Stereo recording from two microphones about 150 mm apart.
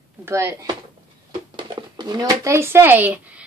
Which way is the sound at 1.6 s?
30° right (ahead or behind).